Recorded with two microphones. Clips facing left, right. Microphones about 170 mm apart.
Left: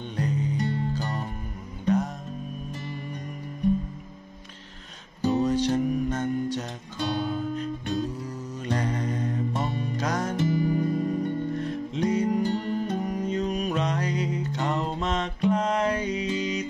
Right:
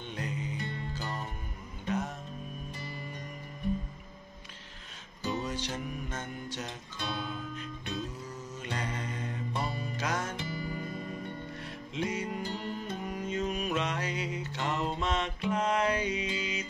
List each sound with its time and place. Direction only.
0.1 s music: 40° left (ahead or behind)
5.2 s music: 40° left (ahead or behind)
12.4 s music: 50° left (ahead or behind)